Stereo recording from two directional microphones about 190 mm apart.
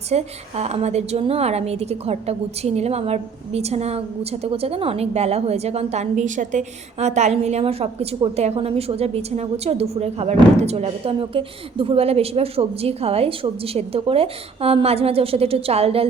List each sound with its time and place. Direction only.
0.1 s a woman's voice: 35° right (ahead or behind)